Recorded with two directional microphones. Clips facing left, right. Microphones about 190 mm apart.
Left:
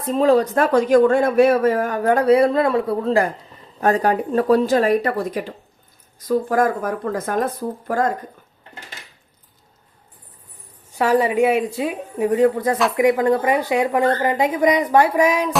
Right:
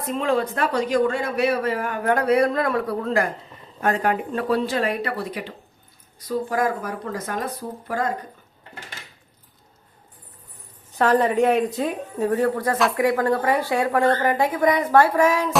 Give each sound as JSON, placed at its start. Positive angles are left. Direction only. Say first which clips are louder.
{"t": 0.0, "sound": "speech", "louder": "left 7 dB", "side_deg": 35}
{"t": 10.9, "sound": "speech", "louder": "left 1 dB", "side_deg": 10}
{"t": 12.7, "sound": "speech", "louder": "left 1 dB", "side_deg": 0}
{"t": 13.0, "sound": "a woman's voice", "louder": "left 4 dB", "side_deg": 20}